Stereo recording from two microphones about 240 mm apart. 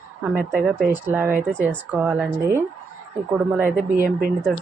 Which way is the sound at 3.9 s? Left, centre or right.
Right.